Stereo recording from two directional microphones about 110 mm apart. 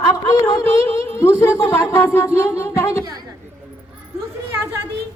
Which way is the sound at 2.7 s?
25° left (ahead or behind).